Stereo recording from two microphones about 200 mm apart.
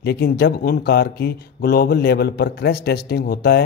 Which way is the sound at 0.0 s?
55° left (ahead or behind).